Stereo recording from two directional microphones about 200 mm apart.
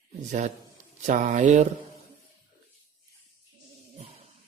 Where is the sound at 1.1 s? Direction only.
35° right (ahead or behind).